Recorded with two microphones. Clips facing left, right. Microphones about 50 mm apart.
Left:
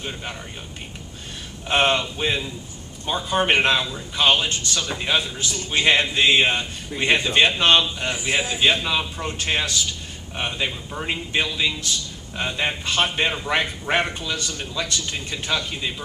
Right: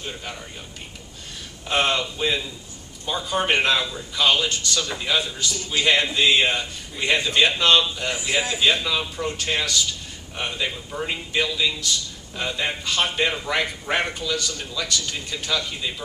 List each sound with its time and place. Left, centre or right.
1.6 s a man's voice: left